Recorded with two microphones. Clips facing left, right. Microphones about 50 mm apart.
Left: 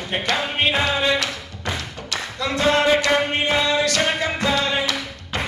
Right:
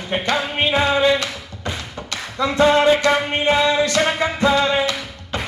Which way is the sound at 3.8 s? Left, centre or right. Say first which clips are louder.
Right 2 dB; right.